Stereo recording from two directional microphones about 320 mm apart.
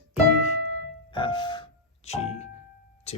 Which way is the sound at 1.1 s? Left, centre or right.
Centre.